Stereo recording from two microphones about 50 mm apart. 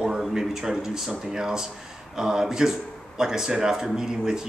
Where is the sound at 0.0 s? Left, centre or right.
Centre.